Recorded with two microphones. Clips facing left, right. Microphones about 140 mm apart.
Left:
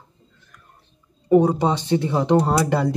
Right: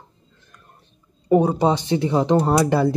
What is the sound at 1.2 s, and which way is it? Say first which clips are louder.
Speech: even; 15° right (ahead or behind).